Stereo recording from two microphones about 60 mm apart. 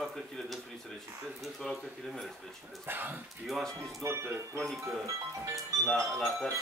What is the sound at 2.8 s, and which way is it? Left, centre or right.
Speech, right.